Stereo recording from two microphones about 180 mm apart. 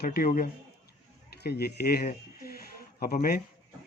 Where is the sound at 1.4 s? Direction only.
65° left (ahead or behind).